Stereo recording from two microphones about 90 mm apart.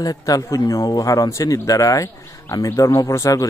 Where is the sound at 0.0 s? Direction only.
40° left (ahead or behind).